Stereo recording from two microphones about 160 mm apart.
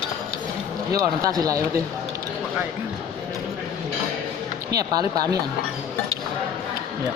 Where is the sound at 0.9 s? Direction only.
20° right (ahead or behind).